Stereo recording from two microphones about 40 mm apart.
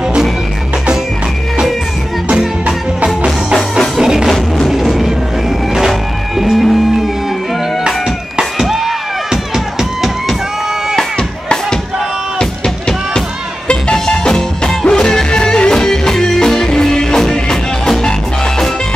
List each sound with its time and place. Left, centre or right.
4.0 s music: centre
4.6 s music: centre
8.4 s music: centre
11.1 s music: left